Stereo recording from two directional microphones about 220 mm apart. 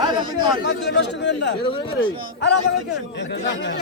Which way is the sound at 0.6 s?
50° left (ahead or behind).